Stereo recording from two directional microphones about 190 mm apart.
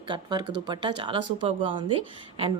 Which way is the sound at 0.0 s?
25° right (ahead or behind).